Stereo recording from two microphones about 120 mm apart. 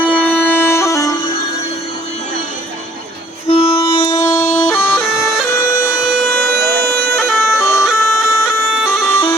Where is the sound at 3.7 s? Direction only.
25° left (ahead or behind).